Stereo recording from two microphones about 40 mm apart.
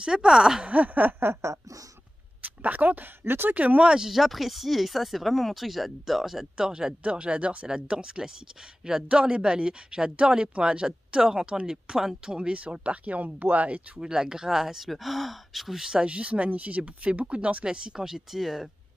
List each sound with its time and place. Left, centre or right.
0.0 s speech: centre
0.7 s a sound: right
2.4 s speech: right
3.3 s speech: right
3.5 s speech: right
3.8 s speech: right
4.1 s speech: centre
6.5 s speech: centre
7.0 s speech: right; by 12.4 s centre
12.4 s speech: right
13.9 s speech: centre
14.9 s speech: centre
15.8 s speech: right
17.6 s speech: centre